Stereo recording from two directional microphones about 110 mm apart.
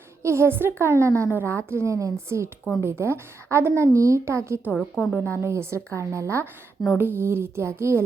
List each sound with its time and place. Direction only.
0.2 s a woman's voice: 25° right (ahead or behind)
4.9 s a woman's voice: 15° left (ahead or behind)
5.4 s a woman's voice: 25° right (ahead or behind)